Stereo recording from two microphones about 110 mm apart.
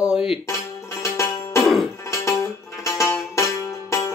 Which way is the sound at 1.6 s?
Centre (ahead or behind).